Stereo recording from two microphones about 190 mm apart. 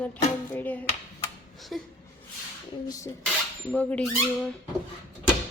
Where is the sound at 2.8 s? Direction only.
20° left (ahead or behind).